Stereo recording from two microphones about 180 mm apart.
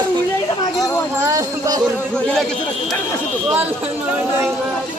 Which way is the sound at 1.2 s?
20° right (ahead or behind).